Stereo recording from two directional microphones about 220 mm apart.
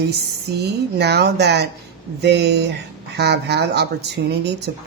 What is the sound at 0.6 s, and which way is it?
Speech, 50° right (ahead or behind).